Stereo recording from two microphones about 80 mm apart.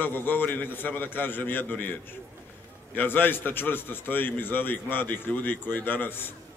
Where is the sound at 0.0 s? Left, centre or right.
Left.